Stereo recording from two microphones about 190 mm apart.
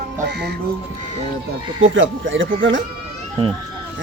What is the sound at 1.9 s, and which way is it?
Speech, 85° right.